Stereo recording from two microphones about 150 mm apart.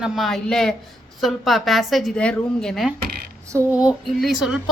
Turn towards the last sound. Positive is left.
turn(degrees=0)  # may be behind; listen again after turning